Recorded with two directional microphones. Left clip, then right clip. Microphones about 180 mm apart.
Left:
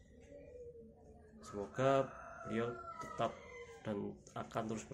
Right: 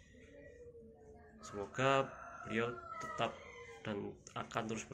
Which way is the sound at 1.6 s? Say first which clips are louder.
Even; 5° left (ahead or behind).